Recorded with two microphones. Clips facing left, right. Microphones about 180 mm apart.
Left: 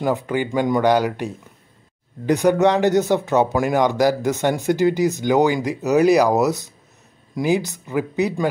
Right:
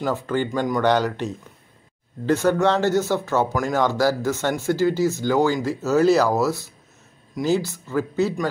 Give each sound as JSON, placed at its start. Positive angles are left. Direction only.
{"t": 0.0, "sound": "speech", "side_deg": 15}